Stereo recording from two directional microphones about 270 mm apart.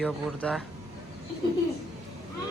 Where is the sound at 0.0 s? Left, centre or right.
Centre.